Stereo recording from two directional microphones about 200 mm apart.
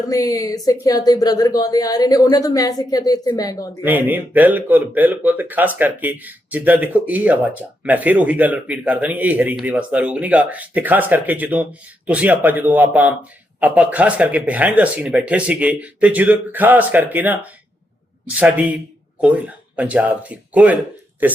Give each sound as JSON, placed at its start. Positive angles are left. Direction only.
{"t": 0.1, "sound": "speech", "side_deg": 15}
{"t": 3.8, "sound": "speech", "side_deg": -10}